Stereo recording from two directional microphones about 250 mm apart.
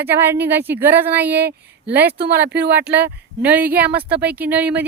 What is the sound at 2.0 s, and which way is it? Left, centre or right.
Speech, right.